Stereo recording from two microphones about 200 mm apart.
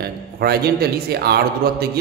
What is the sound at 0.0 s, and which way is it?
Speech, 50° right (ahead or behind).